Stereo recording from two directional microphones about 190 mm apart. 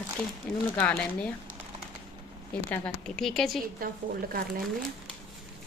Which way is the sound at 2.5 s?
5° left (ahead or behind).